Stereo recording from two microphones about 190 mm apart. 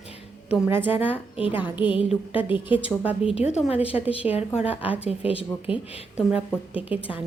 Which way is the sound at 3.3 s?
35° left (ahead or behind).